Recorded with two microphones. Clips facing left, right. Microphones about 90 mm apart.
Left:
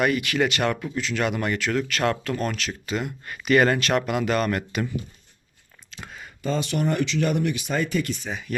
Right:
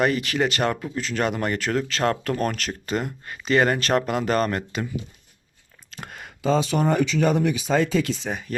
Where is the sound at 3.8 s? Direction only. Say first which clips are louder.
Right 1 dB; 35° right (ahead or behind).